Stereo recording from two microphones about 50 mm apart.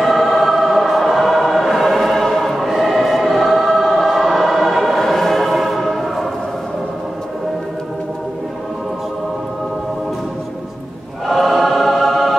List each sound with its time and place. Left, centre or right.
0.0 s choir: centre
11.2 s choir: centre